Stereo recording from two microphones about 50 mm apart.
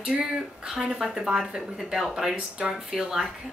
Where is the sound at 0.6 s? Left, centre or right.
Centre.